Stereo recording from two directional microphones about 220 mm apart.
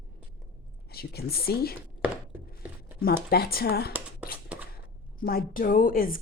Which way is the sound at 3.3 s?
45° left (ahead or behind).